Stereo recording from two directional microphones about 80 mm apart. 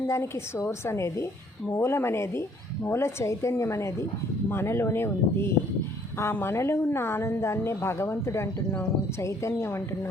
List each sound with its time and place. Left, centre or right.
0.1 s a woman's voice: left